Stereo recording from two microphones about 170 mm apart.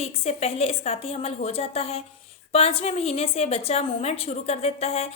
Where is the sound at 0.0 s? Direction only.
35° left (ahead or behind).